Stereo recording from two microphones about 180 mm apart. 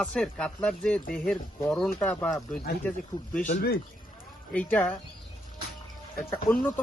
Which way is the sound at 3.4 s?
50° left (ahead or behind).